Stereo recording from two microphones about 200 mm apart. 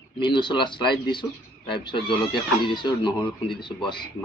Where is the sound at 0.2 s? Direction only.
25° left (ahead or behind).